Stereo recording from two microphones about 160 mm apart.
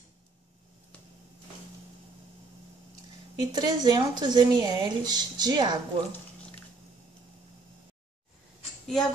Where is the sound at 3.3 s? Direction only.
25° right (ahead or behind).